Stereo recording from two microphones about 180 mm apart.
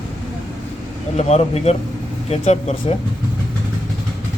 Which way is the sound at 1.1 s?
40° left (ahead or behind).